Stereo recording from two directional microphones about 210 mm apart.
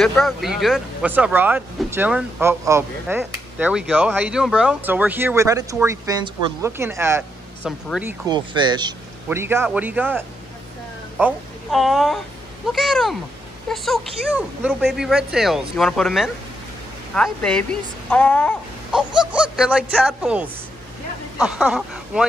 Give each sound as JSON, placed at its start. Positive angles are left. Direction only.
{"t": 0.0, "sound": "speech", "side_deg": 0}
{"t": 8.3, "sound": "a woman's voice", "side_deg": -20}